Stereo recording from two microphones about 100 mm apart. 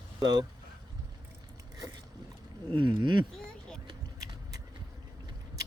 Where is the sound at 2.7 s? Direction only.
50° right (ahead or behind).